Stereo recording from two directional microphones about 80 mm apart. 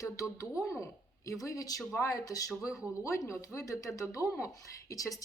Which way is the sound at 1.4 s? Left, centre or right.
Left.